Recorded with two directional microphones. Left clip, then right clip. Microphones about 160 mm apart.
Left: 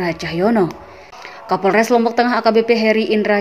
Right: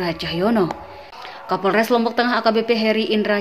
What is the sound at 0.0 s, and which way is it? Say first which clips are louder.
A woman's voice: left 3 dB; 20° left (ahead or behind).